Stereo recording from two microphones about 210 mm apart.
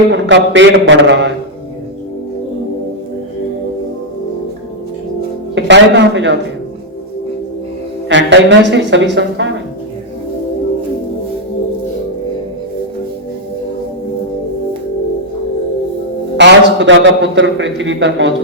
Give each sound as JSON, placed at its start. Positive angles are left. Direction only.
{"t": 0.1, "sound": "a man's voice", "side_deg": -60}
{"t": 5.5, "sound": "a man's voice", "side_deg": -55}
{"t": 8.1, "sound": "a man's voice", "side_deg": -60}
{"t": 16.4, "sound": "a man's voice", "side_deg": -60}